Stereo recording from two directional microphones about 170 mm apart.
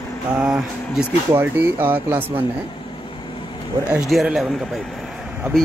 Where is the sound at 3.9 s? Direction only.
5° right (ahead or behind).